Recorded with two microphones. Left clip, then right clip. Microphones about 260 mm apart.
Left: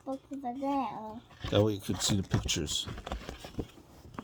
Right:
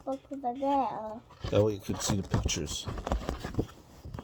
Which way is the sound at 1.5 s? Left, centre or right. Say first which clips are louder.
Right 1 dB; left.